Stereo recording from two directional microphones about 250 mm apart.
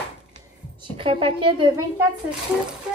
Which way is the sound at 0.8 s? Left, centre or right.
Right.